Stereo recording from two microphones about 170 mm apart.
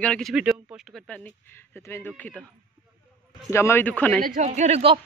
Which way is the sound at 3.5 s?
15° left (ahead or behind).